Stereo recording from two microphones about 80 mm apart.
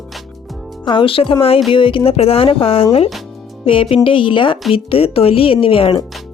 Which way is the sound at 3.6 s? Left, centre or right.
Left.